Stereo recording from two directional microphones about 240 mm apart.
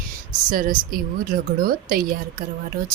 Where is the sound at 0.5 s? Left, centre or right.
Right.